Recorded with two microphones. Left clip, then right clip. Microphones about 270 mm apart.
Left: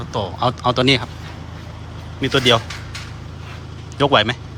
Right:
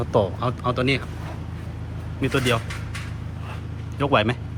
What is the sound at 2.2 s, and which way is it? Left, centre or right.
Speech, centre.